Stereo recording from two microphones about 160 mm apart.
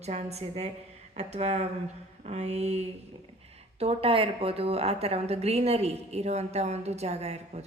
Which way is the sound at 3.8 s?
35° right (ahead or behind).